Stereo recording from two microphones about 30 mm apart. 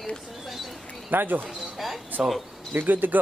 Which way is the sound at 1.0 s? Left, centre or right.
Right.